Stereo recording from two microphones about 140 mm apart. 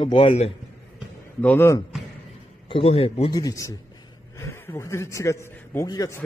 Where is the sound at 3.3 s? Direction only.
25° left (ahead or behind).